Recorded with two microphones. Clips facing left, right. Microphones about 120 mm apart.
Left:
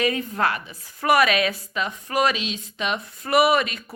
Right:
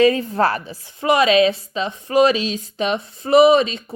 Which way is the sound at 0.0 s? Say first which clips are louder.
Right 7 dB; 30° right (ahead or behind).